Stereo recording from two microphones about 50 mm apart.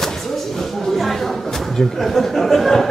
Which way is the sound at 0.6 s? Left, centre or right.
Centre.